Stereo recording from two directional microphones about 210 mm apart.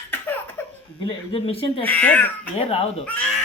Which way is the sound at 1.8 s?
5° left (ahead or behind).